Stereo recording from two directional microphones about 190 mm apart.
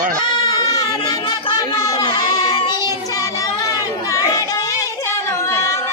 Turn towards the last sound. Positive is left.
turn(degrees=15)  # may be behind; listen again after turning